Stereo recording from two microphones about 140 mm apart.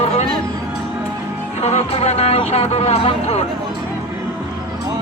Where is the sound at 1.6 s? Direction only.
50° left (ahead or behind).